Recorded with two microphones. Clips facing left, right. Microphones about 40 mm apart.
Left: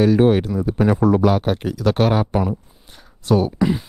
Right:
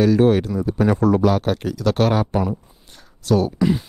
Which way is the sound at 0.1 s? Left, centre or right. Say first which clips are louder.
Left 1 dB; centre.